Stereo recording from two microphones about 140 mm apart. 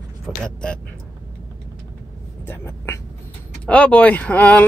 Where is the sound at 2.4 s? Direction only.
15° left (ahead or behind).